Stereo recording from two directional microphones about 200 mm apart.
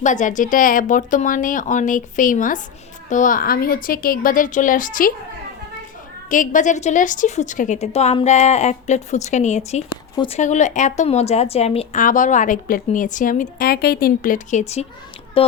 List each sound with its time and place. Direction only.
0.0 s a woman's voice: 40° left (ahead or behind)
6.2 s speech: 40° left (ahead or behind)